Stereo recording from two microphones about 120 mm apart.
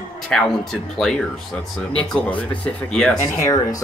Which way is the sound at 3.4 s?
30° left (ahead or behind).